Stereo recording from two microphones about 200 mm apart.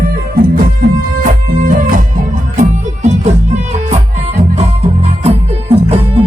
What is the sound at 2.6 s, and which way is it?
Music, 35° right (ahead or behind).